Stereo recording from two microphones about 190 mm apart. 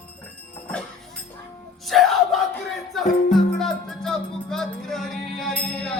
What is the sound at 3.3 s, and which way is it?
Music, centre (ahead or behind).